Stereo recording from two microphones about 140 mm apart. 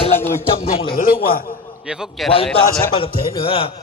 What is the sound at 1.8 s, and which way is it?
Speech, 5° right (ahead or behind).